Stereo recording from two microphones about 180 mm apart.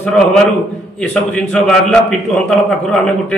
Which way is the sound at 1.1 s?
Centre (ahead or behind).